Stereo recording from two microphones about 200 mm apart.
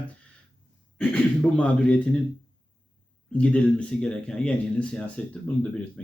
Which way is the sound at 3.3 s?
5° left (ahead or behind).